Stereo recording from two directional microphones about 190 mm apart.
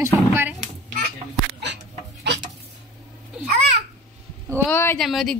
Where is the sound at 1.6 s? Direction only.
65° right (ahead or behind).